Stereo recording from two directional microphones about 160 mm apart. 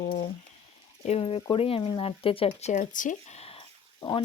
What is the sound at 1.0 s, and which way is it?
Speech, 40° left (ahead or behind).